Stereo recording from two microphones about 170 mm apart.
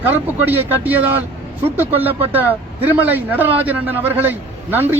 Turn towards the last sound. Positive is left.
turn(degrees=-10)  # may be behind; listen again after turning